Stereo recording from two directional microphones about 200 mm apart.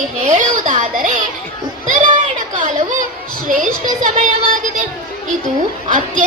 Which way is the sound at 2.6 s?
40° right (ahead or behind).